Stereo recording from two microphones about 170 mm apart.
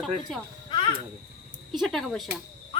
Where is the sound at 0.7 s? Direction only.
30° left (ahead or behind).